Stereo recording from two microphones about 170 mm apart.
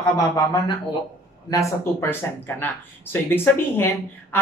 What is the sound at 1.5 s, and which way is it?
Speech, 15° left (ahead or behind).